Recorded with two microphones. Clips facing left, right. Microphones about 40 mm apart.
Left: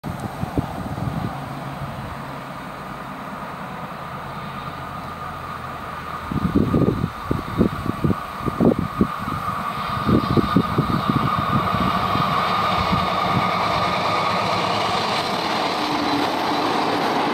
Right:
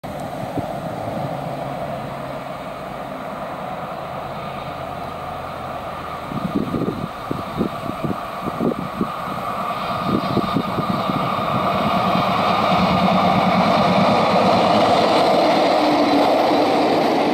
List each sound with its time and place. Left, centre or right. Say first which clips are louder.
9.8 s vehicle: left 3 dB; right; by 15.4 s centre
15.6 s train: right 6 dB; centre